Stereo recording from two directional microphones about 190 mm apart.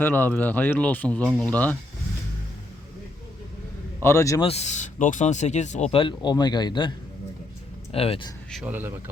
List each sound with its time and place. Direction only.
0.0 s speech: 10° left (ahead or behind)
4.0 s speech: 15° left (ahead or behind)
4.4 s speech: 35° left (ahead or behind)
7.9 s speech: 30° left (ahead or behind)
8.6 s speech: 10° right (ahead or behind)